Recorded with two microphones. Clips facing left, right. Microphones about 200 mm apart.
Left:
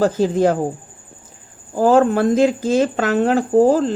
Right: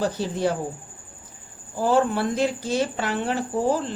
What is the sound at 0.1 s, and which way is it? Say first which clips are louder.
Speech: left 9 dB; 90° left.